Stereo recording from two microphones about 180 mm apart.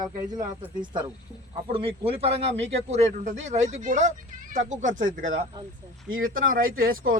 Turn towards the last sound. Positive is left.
turn(degrees=-50)  # may be behind; listen again after turning